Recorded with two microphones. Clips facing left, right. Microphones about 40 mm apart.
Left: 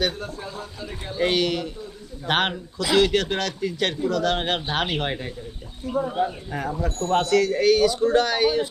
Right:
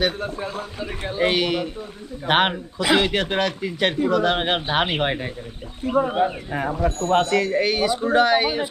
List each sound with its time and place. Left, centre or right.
0.2 s speech: right
1.3 s a man's voice: centre
5.8 s speech: right
6.5 s speech: right
6.7 s speech: right